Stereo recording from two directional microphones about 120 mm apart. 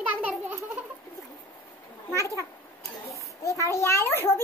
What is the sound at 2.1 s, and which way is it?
A child's voice, 25° left (ahead or behind).